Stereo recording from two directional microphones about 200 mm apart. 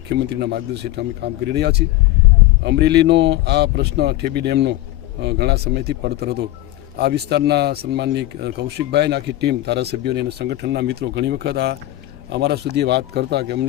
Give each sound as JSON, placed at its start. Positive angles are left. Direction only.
{"t": 0.1, "sound": "speech", "side_deg": -55}